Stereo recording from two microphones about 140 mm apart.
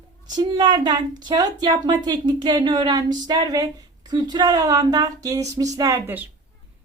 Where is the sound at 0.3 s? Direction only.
30° right (ahead or behind).